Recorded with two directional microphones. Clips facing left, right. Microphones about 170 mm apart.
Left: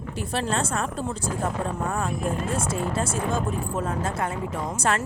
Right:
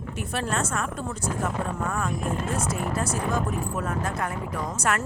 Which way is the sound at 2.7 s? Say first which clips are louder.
Left 1 dB; 25° left (ahead or behind).